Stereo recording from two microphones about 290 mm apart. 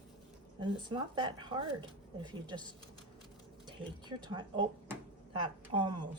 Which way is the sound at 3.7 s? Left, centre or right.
Centre.